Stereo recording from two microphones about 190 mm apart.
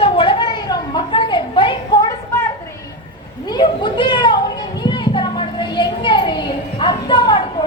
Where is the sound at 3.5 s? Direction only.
25° left (ahead or behind).